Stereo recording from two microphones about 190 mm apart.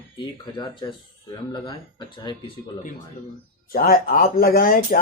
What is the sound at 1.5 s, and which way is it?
Speech, 25° left (ahead or behind).